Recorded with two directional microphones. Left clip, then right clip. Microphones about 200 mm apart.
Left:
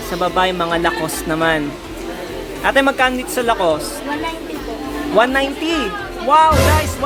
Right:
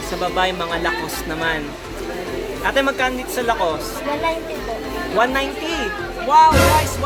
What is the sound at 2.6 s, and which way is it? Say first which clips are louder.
Speech: left 5 dB; 40° left (ahead or behind).